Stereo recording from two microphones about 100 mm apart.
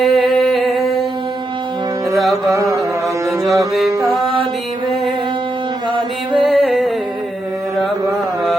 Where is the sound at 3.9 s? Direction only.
35° right (ahead or behind).